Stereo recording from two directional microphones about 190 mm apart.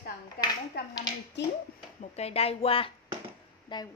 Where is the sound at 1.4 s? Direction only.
65° left (ahead or behind).